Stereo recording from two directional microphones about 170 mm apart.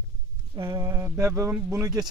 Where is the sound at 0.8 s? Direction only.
15° right (ahead or behind).